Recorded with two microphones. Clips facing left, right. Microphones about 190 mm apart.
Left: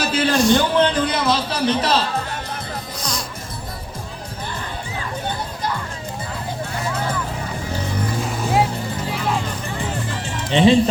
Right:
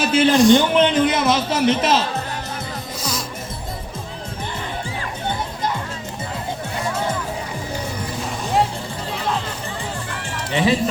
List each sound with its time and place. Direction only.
0.0 s a man's voice: 25° right (ahead or behind)
3.0 s music: 5° right (ahead or behind)
10.5 s speech: 25° left (ahead or behind)